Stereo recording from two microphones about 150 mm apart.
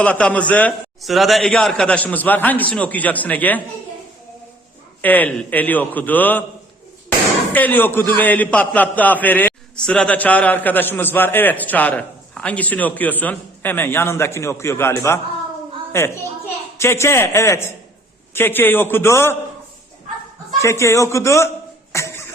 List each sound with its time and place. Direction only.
0.0 s a man's voice: 10° left (ahead or behind)
5.0 s a man's voice: 10° left (ahead or behind)
7.5 s a man's voice: 10° left (ahead or behind)
20.6 s a man's voice: 20° left (ahead or behind)
21.9 s music: 20° left (ahead or behind)